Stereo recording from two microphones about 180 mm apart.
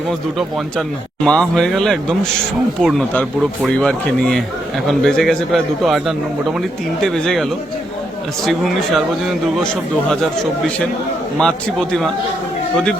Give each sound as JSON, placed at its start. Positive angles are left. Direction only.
{"t": 0.1, "sound": "a man's voice", "side_deg": 0}
{"t": 8.4, "sound": "a man's voice", "side_deg": 0}
{"t": 10.1, "sound": "a man's voice", "side_deg": 5}